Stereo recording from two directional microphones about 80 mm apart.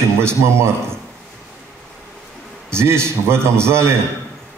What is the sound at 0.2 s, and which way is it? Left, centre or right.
Speech, right.